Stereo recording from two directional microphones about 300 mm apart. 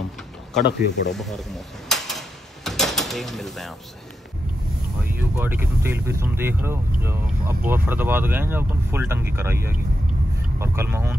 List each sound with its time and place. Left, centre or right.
0.6 s speech: left
1.1 s speech: centre
1.9 s door: centre
5.4 s speech: centre